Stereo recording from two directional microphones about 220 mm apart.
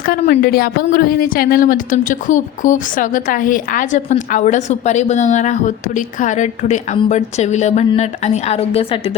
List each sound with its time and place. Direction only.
0.0 s a woman's voice: 45° left (ahead or behind); by 9.1 s 25° left (ahead or behind)